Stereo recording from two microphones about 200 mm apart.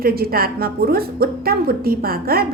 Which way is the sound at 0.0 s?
50° right (ahead or behind).